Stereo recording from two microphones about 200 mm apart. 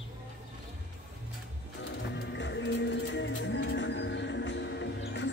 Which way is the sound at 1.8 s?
60° left (ahead or behind).